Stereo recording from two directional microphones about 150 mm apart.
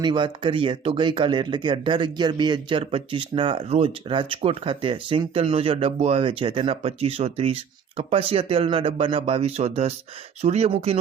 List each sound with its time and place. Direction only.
0.0 s speech: 30° right (ahead or behind)